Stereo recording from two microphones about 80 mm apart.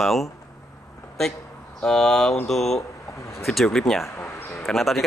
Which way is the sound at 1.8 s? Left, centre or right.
Centre.